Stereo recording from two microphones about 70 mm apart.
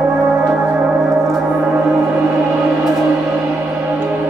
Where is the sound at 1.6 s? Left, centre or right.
Centre.